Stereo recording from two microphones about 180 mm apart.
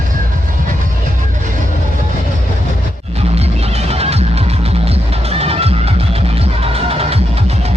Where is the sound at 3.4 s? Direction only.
35° right (ahead or behind).